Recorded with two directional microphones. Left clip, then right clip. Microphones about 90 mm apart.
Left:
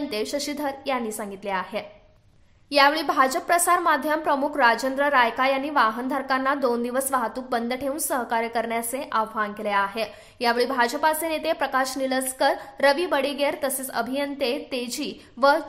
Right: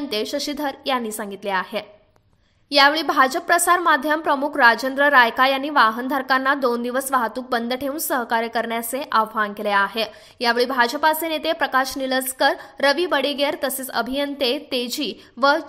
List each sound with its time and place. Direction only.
0.1 s a woman's voice: 30° right (ahead or behind)
15.3 s a woman's voice: 30° right (ahead or behind)